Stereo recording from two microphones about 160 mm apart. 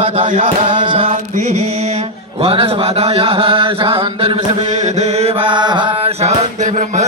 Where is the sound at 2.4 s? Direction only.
35° right (ahead or behind).